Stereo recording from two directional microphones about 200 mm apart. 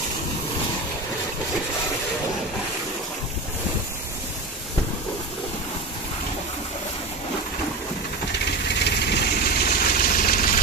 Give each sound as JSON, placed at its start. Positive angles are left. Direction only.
{"t": 8.6, "sound": "vehicle", "side_deg": 55}